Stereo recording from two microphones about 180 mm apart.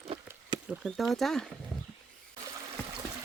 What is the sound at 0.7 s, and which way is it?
Speech, centre (ahead or behind).